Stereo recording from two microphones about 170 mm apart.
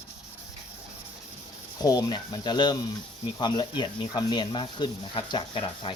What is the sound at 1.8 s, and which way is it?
Speech, 25° left (ahead or behind).